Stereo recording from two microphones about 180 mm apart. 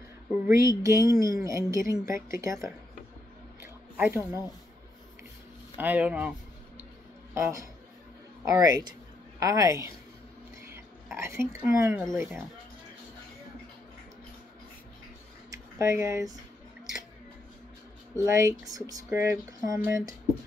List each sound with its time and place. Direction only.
0.3 s speech: 15° right (ahead or behind)
3.9 s speech: 10° right (ahead or behind)
5.8 s speech: 10° right (ahead or behind)
7.3 s speech: 15° right (ahead or behind)
11.1 s speech: 15° right (ahead or behind)
15.5 s speech: 15° right (ahead or behind)
18.1 s speech: 15° right (ahead or behind)